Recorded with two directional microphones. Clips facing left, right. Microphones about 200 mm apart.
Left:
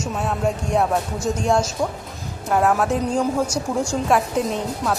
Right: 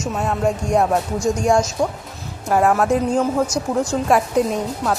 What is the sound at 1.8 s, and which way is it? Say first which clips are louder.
Speech: right 3 dB; 25° right (ahead or behind).